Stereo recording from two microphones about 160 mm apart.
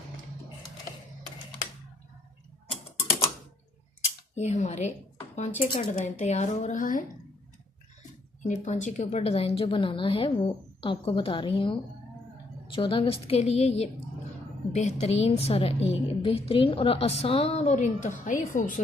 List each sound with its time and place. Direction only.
2.6 s mechanisms: 35° left (ahead or behind)
4.4 s speech: 45° left (ahead or behind)
8.4 s a woman's voice: 50° left (ahead or behind)